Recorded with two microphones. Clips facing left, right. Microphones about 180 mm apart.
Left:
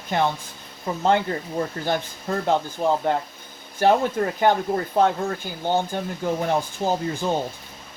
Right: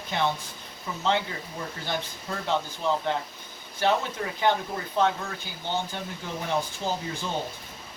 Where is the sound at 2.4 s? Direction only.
45° left (ahead or behind).